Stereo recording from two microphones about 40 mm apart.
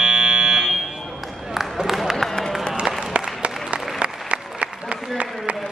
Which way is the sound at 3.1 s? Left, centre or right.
Right.